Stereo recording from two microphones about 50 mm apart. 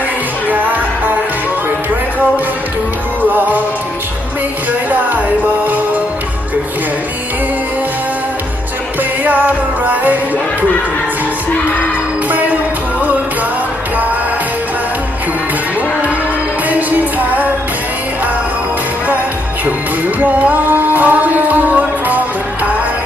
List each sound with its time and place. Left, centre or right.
0.4 s music: right
3.2 s music: right
4.9 s music: right
9.2 s music: right
12.3 s music: right
16.6 s music: right
20.1 s music: right